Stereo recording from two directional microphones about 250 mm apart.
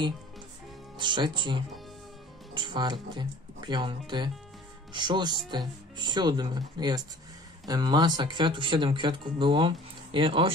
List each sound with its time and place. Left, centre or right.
0.9 s speech: centre